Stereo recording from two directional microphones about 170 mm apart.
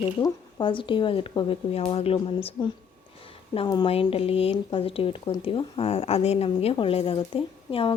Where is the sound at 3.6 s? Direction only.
30° left (ahead or behind).